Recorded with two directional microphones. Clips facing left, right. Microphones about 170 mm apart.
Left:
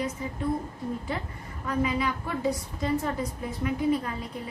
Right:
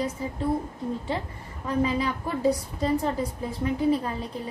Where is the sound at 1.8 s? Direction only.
30° right (ahead or behind).